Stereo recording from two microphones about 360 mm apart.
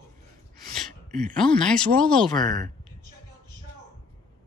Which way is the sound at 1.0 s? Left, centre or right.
Right.